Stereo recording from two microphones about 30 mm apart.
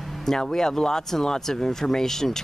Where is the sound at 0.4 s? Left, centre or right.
Left.